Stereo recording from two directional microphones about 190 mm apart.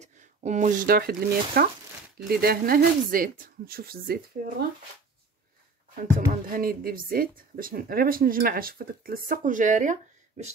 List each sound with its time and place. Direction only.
0.0 s speech: 40° right (ahead or behind)
6.5 s speech: 50° right (ahead or behind)